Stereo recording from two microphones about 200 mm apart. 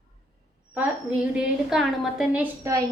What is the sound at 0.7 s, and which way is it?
A woman's voice, 5° right (ahead or behind).